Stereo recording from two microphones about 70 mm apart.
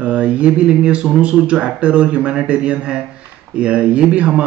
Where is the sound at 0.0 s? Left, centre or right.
Centre.